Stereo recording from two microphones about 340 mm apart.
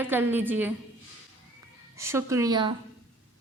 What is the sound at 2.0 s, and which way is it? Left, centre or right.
Speech, centre.